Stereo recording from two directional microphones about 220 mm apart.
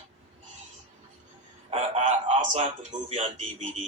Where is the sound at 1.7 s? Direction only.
25° right (ahead or behind).